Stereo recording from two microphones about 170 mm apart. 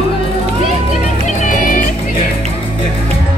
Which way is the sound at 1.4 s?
55° left (ahead or behind).